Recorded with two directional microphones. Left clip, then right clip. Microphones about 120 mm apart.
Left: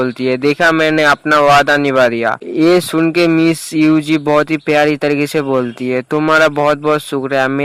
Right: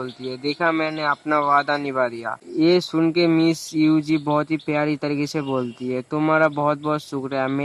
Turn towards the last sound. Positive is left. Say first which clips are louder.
# left 10 dB
turn(degrees=40)  # may be behind; listen again after turning